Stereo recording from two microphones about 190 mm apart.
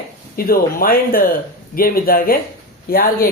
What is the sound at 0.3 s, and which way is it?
Speech, 50° left (ahead or behind).